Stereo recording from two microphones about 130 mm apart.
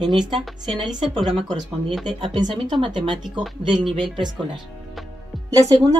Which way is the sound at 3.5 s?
Centre (ahead or behind).